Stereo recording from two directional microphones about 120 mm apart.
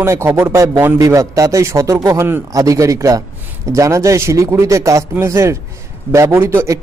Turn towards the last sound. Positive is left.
turn(degrees=-25)  # may be behind; listen again after turning